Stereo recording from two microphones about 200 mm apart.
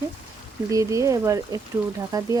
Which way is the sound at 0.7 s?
15° right (ahead or behind).